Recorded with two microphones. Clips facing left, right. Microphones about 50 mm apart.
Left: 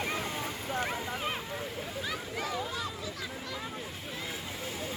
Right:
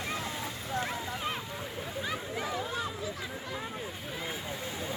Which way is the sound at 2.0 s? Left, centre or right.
Centre.